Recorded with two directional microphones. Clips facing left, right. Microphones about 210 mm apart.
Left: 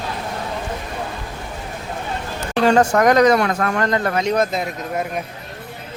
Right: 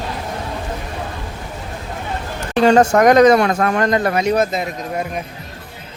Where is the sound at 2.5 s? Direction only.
25° right (ahead or behind); by 5.1 s centre (ahead or behind).